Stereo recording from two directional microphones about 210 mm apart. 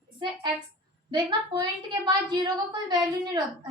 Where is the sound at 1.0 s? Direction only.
20° right (ahead or behind).